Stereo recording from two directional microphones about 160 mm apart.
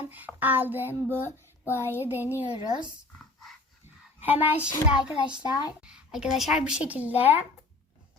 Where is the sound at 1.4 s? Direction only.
15° left (ahead or behind).